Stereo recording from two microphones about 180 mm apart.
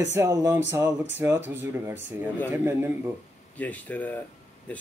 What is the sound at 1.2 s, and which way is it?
Speech, 10° right (ahead or behind).